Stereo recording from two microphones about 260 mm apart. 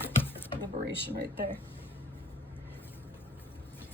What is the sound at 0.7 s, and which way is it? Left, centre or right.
Speech, right.